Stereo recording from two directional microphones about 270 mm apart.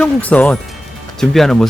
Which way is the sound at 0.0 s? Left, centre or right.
Centre.